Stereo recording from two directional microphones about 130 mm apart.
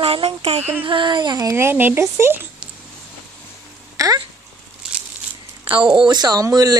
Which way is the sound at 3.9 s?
25° right (ahead or behind).